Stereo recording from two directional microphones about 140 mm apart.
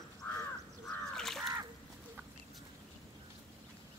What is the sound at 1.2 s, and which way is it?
Crow, centre (ahead or behind).